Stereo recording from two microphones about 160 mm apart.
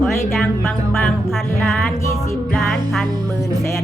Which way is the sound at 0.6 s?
Centre (ahead or behind).